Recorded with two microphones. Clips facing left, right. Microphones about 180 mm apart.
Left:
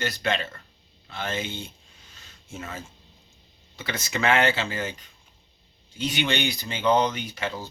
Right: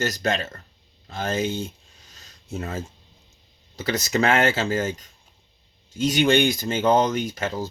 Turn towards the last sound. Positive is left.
turn(degrees=-45)  # may be behind; listen again after turning